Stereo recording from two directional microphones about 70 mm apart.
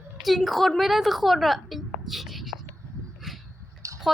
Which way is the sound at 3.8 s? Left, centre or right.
Right.